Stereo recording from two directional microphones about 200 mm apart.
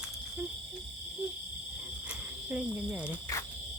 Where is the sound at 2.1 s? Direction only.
5° right (ahead or behind).